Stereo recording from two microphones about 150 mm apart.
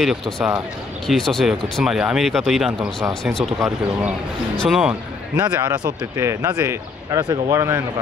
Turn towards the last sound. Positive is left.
turn(degrees=-20)  # may be behind; listen again after turning